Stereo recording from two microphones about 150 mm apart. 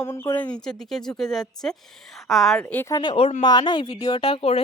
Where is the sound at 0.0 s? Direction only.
20° left (ahead or behind).